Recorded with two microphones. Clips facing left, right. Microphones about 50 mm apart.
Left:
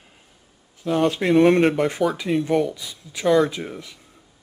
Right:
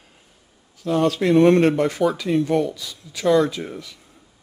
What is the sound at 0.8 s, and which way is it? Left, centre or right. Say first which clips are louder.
Speech: right 1 dB; left.